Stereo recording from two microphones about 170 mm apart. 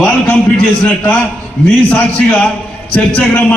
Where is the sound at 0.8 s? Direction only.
10° left (ahead or behind).